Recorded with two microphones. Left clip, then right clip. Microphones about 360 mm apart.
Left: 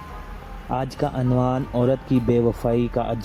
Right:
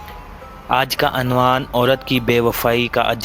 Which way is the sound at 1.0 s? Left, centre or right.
Right.